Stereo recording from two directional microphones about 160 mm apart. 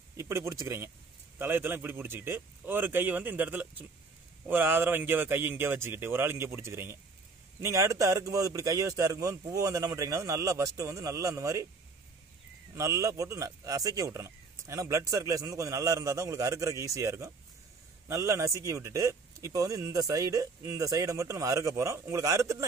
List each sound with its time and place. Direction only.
0.2 s speech: 15° right (ahead or behind)
12.7 s speech: 20° right (ahead or behind)